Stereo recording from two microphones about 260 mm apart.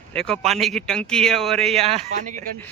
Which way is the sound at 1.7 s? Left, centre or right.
Right.